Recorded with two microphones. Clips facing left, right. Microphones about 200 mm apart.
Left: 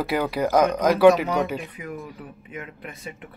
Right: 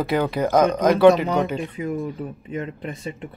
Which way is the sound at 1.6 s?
25° right (ahead or behind).